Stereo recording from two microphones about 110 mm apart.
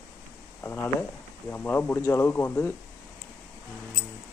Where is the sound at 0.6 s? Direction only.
20° left (ahead or behind).